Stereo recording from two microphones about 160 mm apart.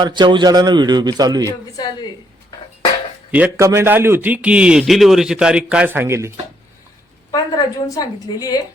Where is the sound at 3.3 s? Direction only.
10° right (ahead or behind).